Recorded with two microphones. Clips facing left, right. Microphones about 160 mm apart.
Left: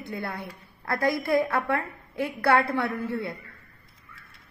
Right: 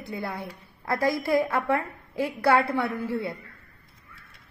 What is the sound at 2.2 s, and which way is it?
Speech, 10° right (ahead or behind).